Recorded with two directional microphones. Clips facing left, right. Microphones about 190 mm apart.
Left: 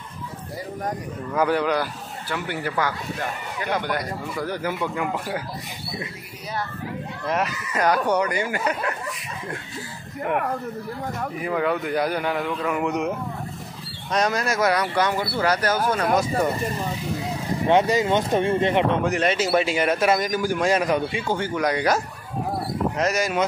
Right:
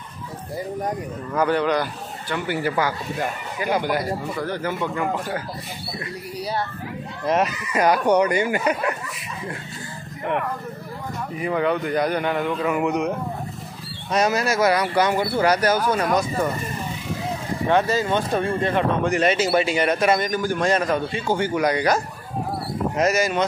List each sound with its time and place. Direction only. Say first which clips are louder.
1.3 s a man's voice: right 1 dB; 5° left (ahead or behind)
4.4 s speech: left 3 dB; 10° left (ahead or behind)
7.2 s speech: right 4 dB; 20° right (ahead or behind)
11.4 s a man's voice: right 2 dB; centre (ahead or behind)
14.1 s speech: right 2 dB; 5° right (ahead or behind)
17.6 s speech: left 1 dB; 20° left (ahead or behind)
19.0 s a man's voice: right 2 dB; centre (ahead or behind)
21.3 s a man's voice: right 4 dB; 5° right (ahead or behind)